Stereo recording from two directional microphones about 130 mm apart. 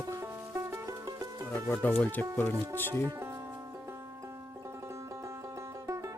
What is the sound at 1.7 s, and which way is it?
Speech, 10° left (ahead or behind).